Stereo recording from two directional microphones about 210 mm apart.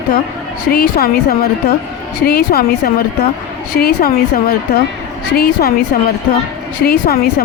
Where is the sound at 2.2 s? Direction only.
45° left (ahead or behind).